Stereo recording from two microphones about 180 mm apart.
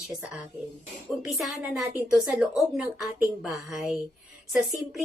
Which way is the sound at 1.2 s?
Centre (ahead or behind).